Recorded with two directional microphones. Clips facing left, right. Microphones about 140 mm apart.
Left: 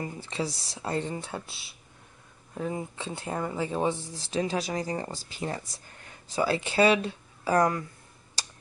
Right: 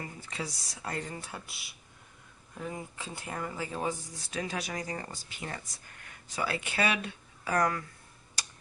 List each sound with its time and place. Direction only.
0.0 s speech: 30° left (ahead or behind)
8.4 s computer keyboard: 30° left (ahead or behind)